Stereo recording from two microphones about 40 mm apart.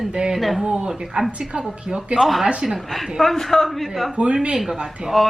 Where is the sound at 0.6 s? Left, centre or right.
Centre.